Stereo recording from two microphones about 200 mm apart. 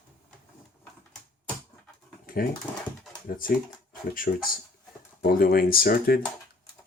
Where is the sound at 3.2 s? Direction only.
45° left (ahead or behind).